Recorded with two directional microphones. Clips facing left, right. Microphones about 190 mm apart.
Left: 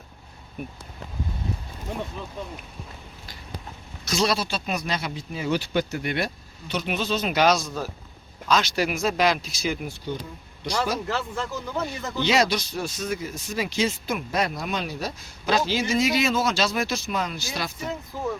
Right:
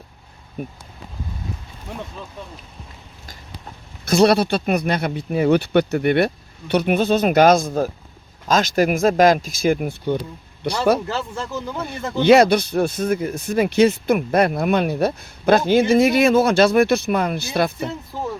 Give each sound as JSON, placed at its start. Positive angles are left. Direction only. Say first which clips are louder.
{"t": 4.0, "sound": "speech", "louder": "right 10 dB", "side_deg": -55}